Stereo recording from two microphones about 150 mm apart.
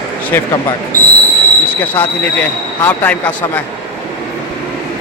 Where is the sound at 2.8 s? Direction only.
15° left (ahead or behind).